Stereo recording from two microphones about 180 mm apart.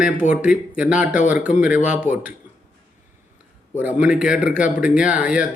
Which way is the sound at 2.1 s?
5° right (ahead or behind).